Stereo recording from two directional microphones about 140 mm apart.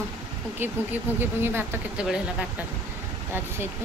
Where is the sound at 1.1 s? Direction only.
15° right (ahead or behind).